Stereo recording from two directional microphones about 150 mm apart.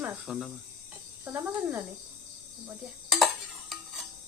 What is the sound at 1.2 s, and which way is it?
Speech, 15° right (ahead or behind).